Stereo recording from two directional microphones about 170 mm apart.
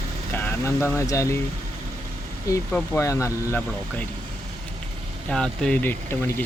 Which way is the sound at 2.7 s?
15° left (ahead or behind).